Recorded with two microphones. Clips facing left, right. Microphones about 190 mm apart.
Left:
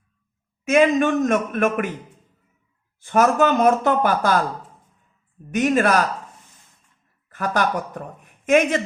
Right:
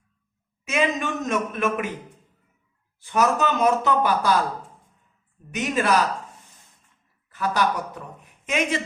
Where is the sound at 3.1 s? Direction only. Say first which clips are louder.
Left 4 dB; 50° left (ahead or behind).